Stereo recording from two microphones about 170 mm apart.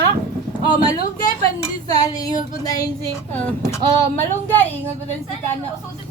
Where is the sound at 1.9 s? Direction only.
20° left (ahead or behind).